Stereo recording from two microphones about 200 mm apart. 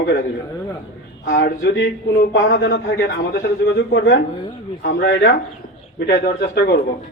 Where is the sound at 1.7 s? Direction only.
55° left (ahead or behind).